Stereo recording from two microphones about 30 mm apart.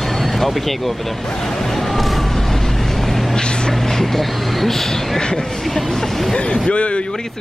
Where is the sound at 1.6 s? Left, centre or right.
Centre.